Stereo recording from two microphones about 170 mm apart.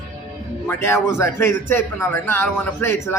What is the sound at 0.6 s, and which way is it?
A man's voice, 15° left (ahead or behind).